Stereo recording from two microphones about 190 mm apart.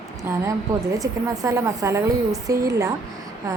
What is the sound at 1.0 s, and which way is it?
Speech, 15° right (ahead or behind).